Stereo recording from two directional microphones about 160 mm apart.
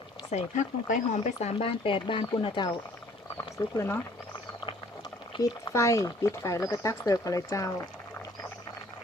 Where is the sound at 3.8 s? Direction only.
15° left (ahead or behind).